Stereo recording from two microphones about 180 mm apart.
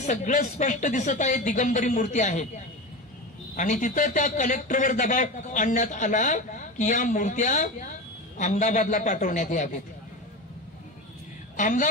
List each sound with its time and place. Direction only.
0.0 s a man's voice: 45° left (ahead or behind)
3.5 s a man's voice: 45° left (ahead or behind)
11.5 s a woman's voice: 45° left (ahead or behind)